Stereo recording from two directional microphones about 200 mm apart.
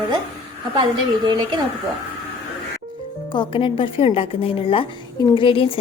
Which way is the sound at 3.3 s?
25° left (ahead or behind).